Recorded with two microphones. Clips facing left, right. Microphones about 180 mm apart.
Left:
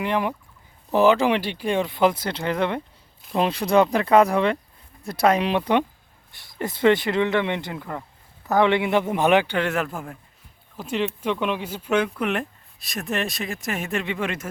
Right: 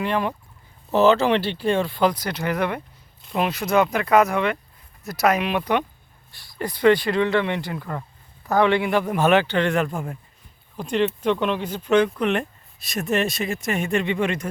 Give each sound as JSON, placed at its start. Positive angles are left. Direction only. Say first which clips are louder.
{"t": 0.0, "sound": "a man's voice", "louder": "even", "side_deg": 15}